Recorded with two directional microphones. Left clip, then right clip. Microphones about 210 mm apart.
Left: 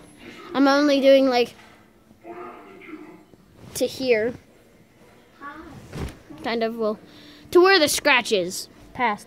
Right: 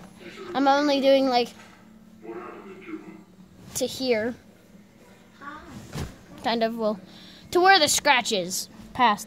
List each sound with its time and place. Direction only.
0.5 s speech: 15° left (ahead or behind)
3.7 s speech: 15° left (ahead or behind)
6.4 s a woman's voice: 5° right (ahead or behind)
8.9 s a woman's voice: 10° right (ahead or behind)